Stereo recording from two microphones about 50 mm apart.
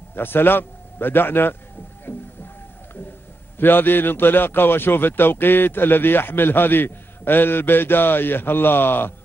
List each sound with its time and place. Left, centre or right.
0.1 s a man's voice: left
2.1 s music: left
3.5 s a man's voice: left